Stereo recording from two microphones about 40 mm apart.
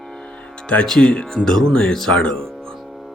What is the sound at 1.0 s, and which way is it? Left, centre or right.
Speech, left.